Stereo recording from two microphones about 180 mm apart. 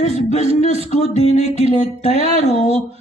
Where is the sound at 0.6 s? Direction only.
35° right (ahead or behind).